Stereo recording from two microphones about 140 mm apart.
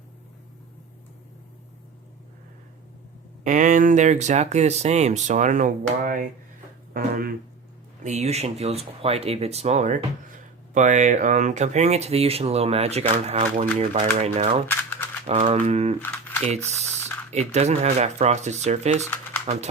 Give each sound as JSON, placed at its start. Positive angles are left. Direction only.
{"t": 3.4, "sound": "speech", "side_deg": -65}
{"t": 6.9, "sound": "speech", "side_deg": -90}
{"t": 8.0, "sound": "speech", "side_deg": -50}
{"t": 14.7, "sound": "a sound", "side_deg": 15}
{"t": 15.5, "sound": "speech", "side_deg": -45}
{"t": 16.0, "sound": "a sound", "side_deg": 15}
{"t": 16.4, "sound": "speech", "side_deg": -50}